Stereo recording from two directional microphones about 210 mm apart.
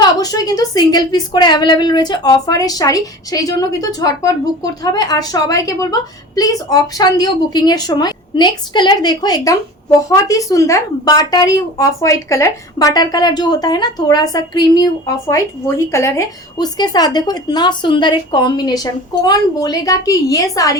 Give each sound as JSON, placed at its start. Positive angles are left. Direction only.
{"t": 0.2, "sound": "a woman's voice", "side_deg": 15}